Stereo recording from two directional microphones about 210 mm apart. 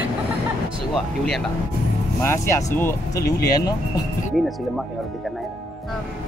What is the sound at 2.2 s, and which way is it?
Speech, 15° left (ahead or behind).